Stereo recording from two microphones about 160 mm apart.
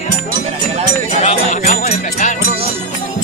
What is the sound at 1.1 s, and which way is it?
Jingle bell, 45° left (ahead or behind).